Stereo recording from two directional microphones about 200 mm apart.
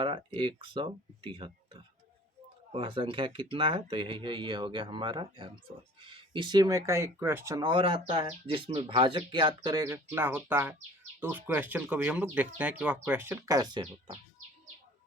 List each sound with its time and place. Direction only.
0.0 s speech: 25° right (ahead or behind)